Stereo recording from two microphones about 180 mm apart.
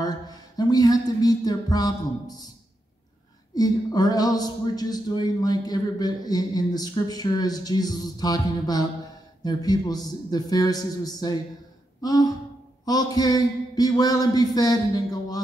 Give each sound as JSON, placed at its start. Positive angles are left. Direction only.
{"t": 0.0, "sound": "music", "side_deg": 20}
{"t": 3.5, "sound": "a man's voice", "side_deg": 20}